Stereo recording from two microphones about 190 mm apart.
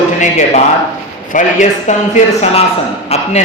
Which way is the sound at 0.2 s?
40° left (ahead or behind).